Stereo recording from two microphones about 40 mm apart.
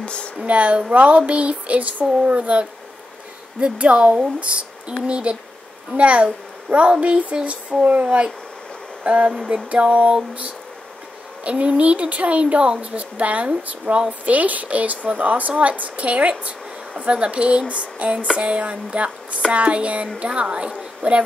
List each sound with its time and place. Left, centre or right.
0.0 s a sound: left
0.5 s a woman's voice: right
3.6 s a woman's voice: right
11.4 s a woman's voice: right